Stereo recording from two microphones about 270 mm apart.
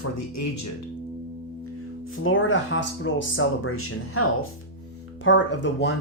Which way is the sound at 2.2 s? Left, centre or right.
Left.